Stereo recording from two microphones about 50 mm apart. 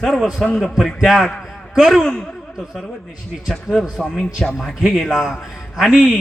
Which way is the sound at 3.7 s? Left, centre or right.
Centre.